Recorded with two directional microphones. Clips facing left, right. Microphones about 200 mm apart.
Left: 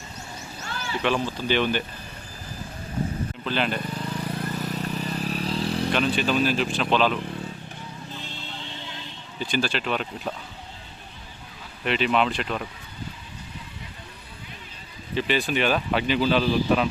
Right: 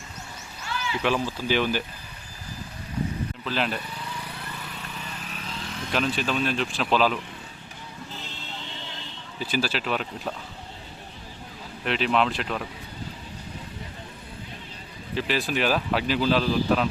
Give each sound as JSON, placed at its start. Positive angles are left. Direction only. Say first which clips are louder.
{"t": 0.6, "sound": "a sound", "louder": "right 3 dB", "side_deg": 45}
{"t": 1.0, "sound": "speech", "louder": "left 1 dB", "side_deg": -5}
{"t": 3.4, "sound": "speech", "louder": "left 2 dB", "side_deg": 0}
{"t": 3.8, "sound": "vehicle", "louder": "left 6 dB", "side_deg": 50}
{"t": 5.9, "sound": "speech", "louder": "even", "side_deg": 0}
{"t": 9.4, "sound": "speech", "louder": "left 1 dB", "side_deg": -5}
{"t": 11.9, "sound": "speech", "louder": "left 1 dB", "side_deg": 0}
{"t": 15.1, "sound": "speech", "louder": "left 2 dB", "side_deg": 0}